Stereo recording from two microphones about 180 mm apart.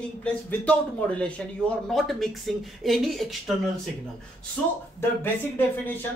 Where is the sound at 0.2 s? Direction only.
5° left (ahead or behind).